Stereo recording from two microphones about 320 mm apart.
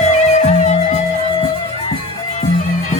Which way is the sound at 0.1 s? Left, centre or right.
Left.